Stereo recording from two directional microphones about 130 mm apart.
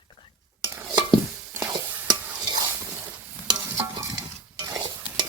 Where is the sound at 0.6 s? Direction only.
25° right (ahead or behind).